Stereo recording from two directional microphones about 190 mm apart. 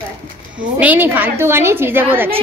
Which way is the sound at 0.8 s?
10° right (ahead or behind).